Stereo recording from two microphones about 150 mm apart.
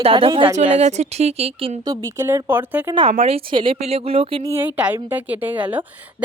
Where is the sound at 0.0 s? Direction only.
35° right (ahead or behind).